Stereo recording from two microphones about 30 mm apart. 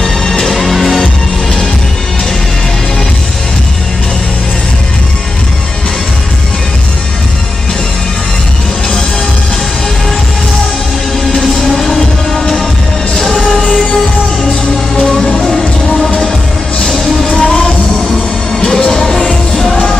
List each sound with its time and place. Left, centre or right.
0.0 s music: centre
11.3 s music: centre
15.0 s music: centre
16.0 s music: left
16.8 s music: centre
17.3 s music: left